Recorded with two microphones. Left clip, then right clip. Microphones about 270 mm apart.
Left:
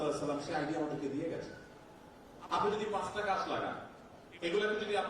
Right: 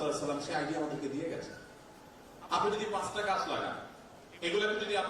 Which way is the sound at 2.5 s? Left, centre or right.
Centre.